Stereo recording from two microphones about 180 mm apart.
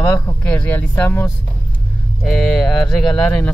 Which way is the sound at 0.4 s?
10° left (ahead or behind).